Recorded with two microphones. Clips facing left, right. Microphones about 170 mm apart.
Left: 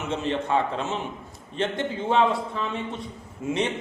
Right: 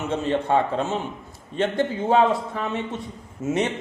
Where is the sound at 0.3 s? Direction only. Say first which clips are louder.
Right 3 dB; 40° right (ahead or behind).